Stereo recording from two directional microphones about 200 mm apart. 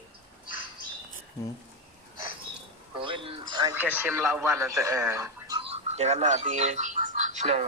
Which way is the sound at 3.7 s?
10° right (ahead or behind).